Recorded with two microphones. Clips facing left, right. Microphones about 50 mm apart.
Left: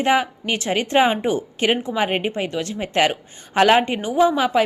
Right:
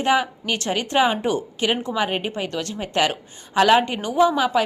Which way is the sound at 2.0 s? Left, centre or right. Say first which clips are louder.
Left 2 dB; left.